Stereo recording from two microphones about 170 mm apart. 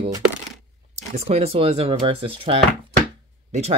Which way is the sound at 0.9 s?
40° right (ahead or behind).